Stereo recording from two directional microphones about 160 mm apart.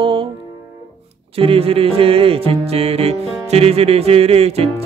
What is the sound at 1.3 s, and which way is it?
Music, 35° right (ahead or behind).